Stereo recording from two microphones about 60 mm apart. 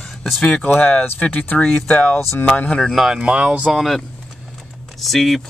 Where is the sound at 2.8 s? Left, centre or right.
Centre.